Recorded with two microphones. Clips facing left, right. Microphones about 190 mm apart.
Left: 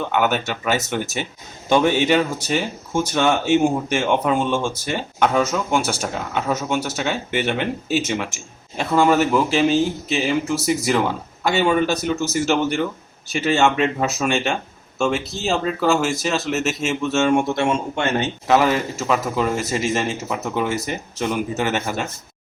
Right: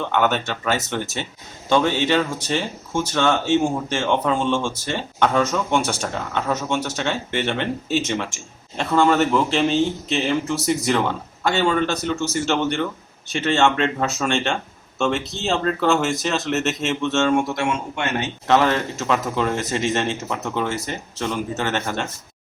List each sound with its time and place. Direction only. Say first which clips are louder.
0.0 s a man's voice: even; 10° left (ahead or behind)
17.3 s a man's voice: left 2 dB; 25° left (ahead or behind)
18.4 s a man's voice: even; 5° left (ahead or behind)